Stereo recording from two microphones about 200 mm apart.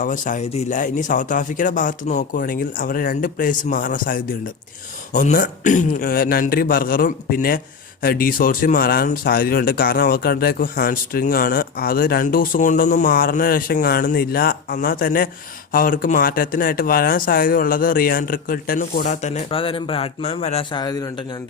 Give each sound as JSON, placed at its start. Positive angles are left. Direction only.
{"t": 0.0, "sound": "speech", "side_deg": 40}
{"t": 20.7, "sound": "a man's voice", "side_deg": 20}